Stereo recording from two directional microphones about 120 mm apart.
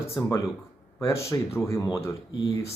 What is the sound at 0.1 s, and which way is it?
Speech, 25° left (ahead or behind).